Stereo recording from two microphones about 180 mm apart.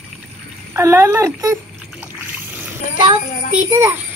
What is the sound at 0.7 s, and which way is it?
Speech, 15° right (ahead or behind).